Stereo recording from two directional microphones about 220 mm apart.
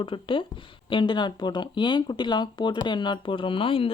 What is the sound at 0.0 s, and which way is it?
Speech, 25° left (ahead or behind).